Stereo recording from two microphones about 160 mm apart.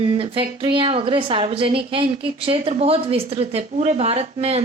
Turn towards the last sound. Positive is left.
turn(degrees=-40)  # may be behind; listen again after turning